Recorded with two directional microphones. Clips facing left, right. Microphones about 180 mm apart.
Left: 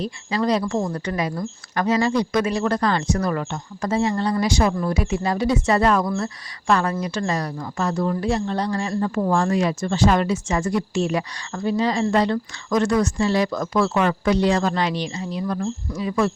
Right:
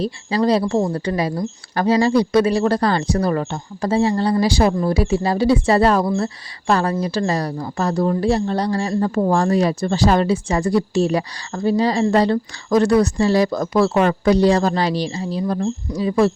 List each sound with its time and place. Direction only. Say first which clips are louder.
0.0 s a woman's voice: right 4 dB; 35° right (ahead or behind)